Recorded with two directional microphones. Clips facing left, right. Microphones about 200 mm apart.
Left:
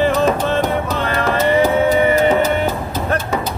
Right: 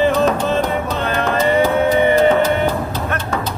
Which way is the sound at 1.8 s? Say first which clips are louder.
Right 1 dB; 10° left (ahead or behind).